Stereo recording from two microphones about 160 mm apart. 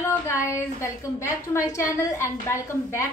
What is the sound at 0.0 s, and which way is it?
A woman's voice, 15° left (ahead or behind).